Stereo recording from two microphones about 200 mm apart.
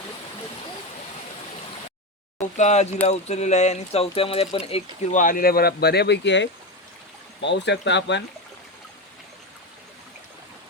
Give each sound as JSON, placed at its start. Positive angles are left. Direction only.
{"t": 2.4, "sound": "speech", "side_deg": 35}
{"t": 5.1, "sound": "speech", "side_deg": 45}